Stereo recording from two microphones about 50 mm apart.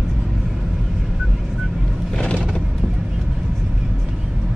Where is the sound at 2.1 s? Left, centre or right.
Left.